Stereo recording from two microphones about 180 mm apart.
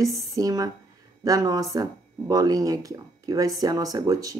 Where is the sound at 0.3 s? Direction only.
20° right (ahead or behind).